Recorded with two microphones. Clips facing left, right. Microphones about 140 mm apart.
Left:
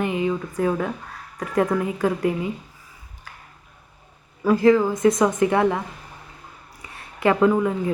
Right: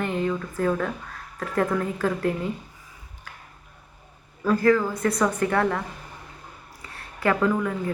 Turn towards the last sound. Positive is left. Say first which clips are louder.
# left 4 dB
turn(degrees=20)  # may be behind; listen again after turning